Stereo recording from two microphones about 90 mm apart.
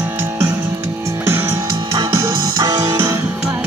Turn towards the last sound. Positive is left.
turn(degrees=-45)  # may be behind; listen again after turning